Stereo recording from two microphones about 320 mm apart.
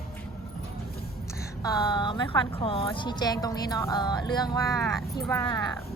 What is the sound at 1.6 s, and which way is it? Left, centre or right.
A woman's voice, centre.